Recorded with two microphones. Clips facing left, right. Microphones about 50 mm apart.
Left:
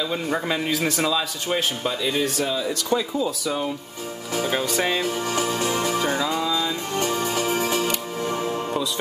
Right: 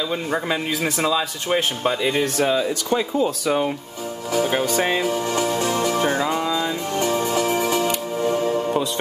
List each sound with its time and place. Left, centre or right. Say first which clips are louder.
0.1 s a man's voice: right 1 dB; centre
1.8 s speech: right 3 dB; right
4.8 s music: right 3 dB; centre
5.6 s speech: right 2 dB; left
5.9 s music: right 2 dB; right
7.0 s music: right 3 dB; centre